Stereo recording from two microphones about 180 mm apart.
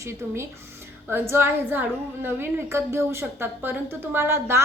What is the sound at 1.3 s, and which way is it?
A woman's voice, 10° right (ahead or behind).